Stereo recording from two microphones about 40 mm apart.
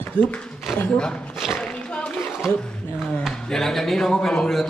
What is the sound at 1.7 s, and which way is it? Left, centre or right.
Splash, left.